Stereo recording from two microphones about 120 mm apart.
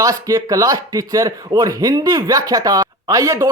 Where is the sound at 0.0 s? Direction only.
30° right (ahead or behind).